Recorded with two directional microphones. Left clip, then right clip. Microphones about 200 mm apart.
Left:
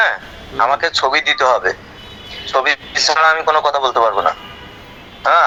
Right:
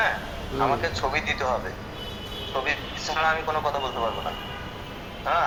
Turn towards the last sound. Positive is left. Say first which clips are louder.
# left 12 dB
turn(degrees=45)  # may be behind; listen again after turning